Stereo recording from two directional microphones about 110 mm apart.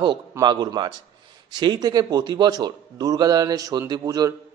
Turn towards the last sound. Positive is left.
turn(degrees=-35)  # may be behind; listen again after turning